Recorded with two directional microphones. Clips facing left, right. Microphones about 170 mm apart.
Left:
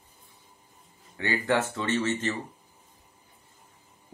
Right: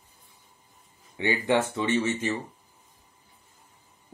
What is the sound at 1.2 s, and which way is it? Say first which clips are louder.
Speech: right 2 dB; 15° right (ahead or behind).